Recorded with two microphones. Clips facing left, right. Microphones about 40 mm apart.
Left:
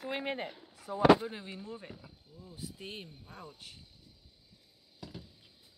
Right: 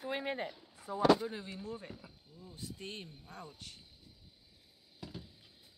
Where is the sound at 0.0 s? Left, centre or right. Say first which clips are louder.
Left 1 dB; left.